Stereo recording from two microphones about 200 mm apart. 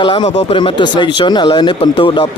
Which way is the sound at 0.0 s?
25° left (ahead or behind).